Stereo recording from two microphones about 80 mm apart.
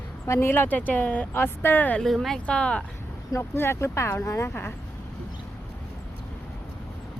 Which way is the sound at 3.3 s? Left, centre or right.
Left.